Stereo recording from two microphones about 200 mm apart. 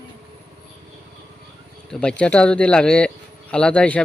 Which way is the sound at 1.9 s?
5° left (ahead or behind).